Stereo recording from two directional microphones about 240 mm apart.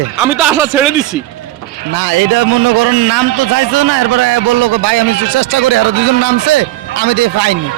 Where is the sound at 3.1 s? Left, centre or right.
Right.